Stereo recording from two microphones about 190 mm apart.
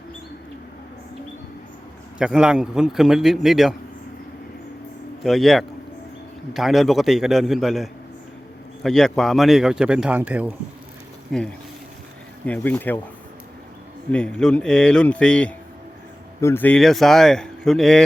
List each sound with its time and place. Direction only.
2.1 s speech: 5° right (ahead or behind)
5.2 s speech: centre (ahead or behind)
12.5 s speech: 10° left (ahead or behind)
14.1 s speech: 5° left (ahead or behind)